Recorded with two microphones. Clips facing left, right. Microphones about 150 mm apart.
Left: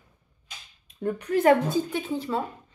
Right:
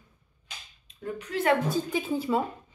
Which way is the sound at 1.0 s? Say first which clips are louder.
Left 7 dB; 45° left (ahead or behind).